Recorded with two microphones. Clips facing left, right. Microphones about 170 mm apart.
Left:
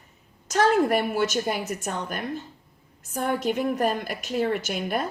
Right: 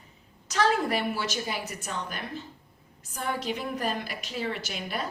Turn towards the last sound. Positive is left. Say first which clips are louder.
# left 7 dB
turn(degrees=50)  # may be behind; listen again after turning